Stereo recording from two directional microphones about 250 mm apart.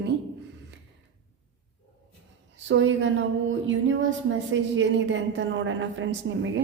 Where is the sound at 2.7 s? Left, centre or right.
Right.